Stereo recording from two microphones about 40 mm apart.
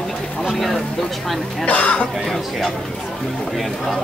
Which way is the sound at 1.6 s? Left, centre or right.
Left.